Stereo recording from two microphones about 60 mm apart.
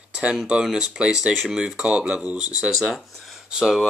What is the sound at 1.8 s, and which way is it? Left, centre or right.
Speech, centre.